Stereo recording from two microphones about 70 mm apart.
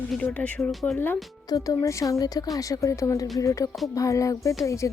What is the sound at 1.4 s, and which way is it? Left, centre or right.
Speech, left.